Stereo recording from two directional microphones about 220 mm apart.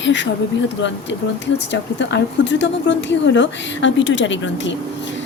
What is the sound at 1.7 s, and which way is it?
Speech, 55° left (ahead or behind).